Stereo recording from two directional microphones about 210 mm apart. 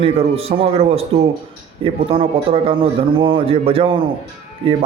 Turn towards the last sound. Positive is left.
turn(degrees=-25)  # may be behind; listen again after turning